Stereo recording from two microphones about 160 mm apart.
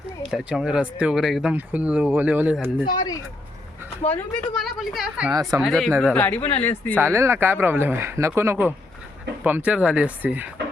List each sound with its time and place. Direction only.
0.3 s speech: centre (ahead or behind)
2.8 s speech: 25° left (ahead or behind)
4.4 s speech: centre (ahead or behind)
5.3 s speech: 20° right (ahead or behind)
5.6 s speech: 5° left (ahead or behind)
6.9 s speech: 15° right (ahead or behind)